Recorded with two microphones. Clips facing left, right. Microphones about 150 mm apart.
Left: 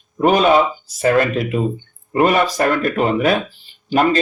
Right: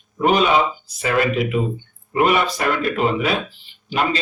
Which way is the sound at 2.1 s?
40° left (ahead or behind).